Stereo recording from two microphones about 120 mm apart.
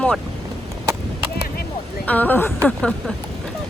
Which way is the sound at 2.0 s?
15° left (ahead or behind).